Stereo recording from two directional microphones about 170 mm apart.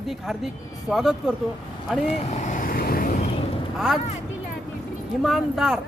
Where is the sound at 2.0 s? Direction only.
40° left (ahead or behind); by 3.1 s 60° left (ahead or behind).